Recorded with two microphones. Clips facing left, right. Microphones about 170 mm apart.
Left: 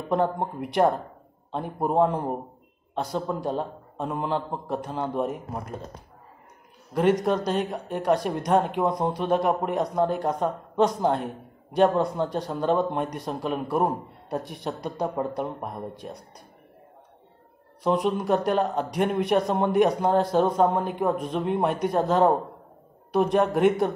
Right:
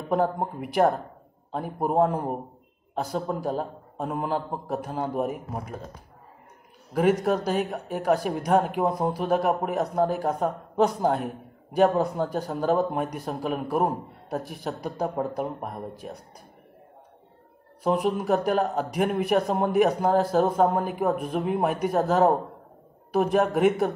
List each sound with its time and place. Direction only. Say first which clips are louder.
0.1 s speech: even; 5° right (ahead or behind)
6.9 s speech: even; 10° right (ahead or behind)
17.8 s speech: even; 5° right (ahead or behind)